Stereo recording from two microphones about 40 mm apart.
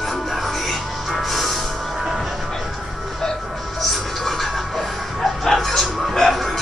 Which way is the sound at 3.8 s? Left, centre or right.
Centre.